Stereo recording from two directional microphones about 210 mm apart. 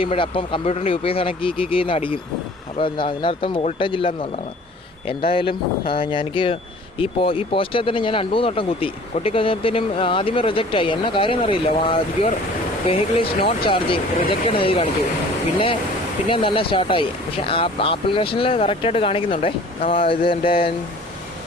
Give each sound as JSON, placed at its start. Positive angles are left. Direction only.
{"t": 0.0, "sound": "speech", "side_deg": 25}